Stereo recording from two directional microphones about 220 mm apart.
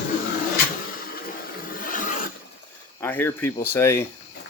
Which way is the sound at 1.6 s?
40° left (ahead or behind).